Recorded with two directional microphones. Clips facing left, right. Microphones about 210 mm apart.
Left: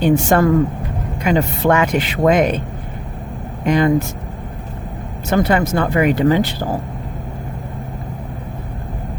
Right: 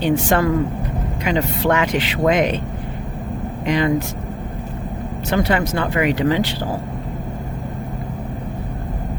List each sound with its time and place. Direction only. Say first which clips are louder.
0.0 s speech: left 3 dB; 45° left (ahead or behind)
3.7 s speech: left 4 dB; 50° left (ahead or behind)
5.4 s speech: left 3 dB; 45° left (ahead or behind)